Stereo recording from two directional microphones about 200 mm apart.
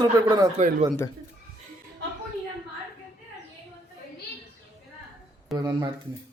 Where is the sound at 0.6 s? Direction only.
40° right (ahead or behind).